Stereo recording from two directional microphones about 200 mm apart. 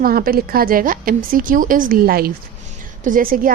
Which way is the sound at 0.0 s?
45° right (ahead or behind).